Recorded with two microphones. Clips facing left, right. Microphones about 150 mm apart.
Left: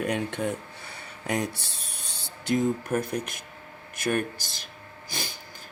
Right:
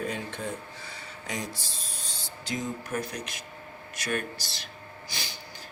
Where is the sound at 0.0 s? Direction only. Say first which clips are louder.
Left 5 dB; 70° left (ahead or behind).